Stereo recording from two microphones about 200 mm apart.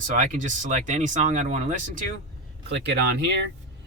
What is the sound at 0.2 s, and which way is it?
Speech, 40° right (ahead or behind).